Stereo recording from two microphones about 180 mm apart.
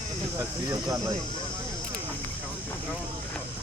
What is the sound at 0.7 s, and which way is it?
Speech, 20° right (ahead or behind).